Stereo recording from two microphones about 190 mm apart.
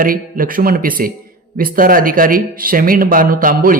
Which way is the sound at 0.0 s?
45° right (ahead or behind).